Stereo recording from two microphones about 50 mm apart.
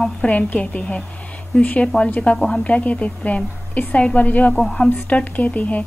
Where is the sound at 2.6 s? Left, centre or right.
Left.